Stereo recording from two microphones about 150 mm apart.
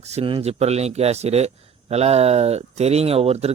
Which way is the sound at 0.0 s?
45° right (ahead or behind).